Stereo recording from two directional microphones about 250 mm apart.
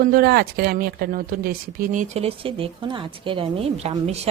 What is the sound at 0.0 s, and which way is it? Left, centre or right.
Speech, right.